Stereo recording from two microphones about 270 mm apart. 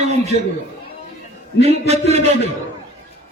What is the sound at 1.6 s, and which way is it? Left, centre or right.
Speech, right.